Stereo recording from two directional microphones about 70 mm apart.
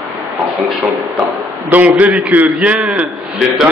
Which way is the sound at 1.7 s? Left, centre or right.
Right.